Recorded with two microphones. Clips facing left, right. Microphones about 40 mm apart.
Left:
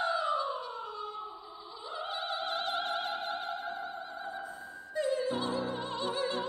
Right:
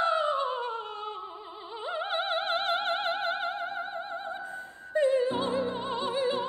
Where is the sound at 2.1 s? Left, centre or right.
Right.